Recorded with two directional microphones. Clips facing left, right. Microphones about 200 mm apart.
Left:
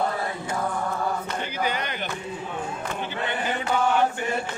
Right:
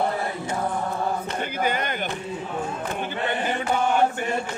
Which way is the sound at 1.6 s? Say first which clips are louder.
Right 3 dB; 50° right (ahead or behind).